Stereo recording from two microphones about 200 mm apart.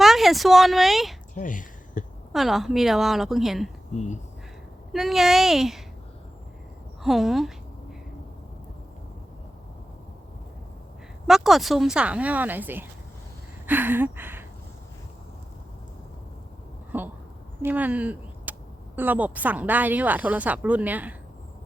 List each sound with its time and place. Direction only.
0.0 s speech: centre (ahead or behind)
1.4 s speech: 40° left (ahead or behind)
2.3 s speech: centre (ahead or behind)
3.9 s speech: 35° left (ahead or behind)
4.9 s speech: centre (ahead or behind)
7.0 s speech: centre (ahead or behind)
11.3 s speech: centre (ahead or behind)
13.7 s a sound: 10° right (ahead or behind)
16.9 s speech: 10° right (ahead or behind)